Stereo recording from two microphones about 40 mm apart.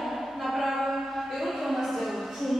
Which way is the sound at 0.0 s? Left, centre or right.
Centre.